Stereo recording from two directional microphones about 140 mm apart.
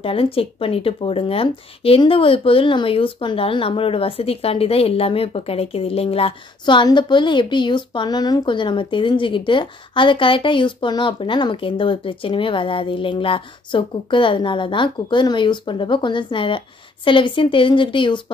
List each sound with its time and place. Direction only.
0.0 s speech: 40° left (ahead or behind)